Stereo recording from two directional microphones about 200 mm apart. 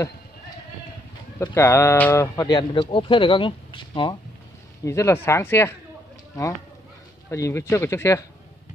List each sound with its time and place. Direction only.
1.4 s speech: 10° left (ahead or behind)
7.2 s speech: 15° left (ahead or behind)